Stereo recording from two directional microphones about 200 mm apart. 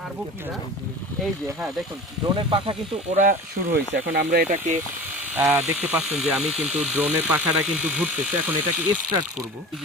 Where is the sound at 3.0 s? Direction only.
40° right (ahead or behind).